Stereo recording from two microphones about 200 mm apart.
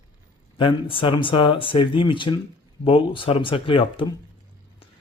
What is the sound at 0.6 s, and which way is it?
Speech, 25° left (ahead or behind).